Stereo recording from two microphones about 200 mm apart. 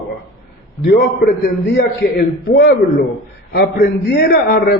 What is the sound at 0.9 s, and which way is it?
A man's voice, 55° left (ahead or behind).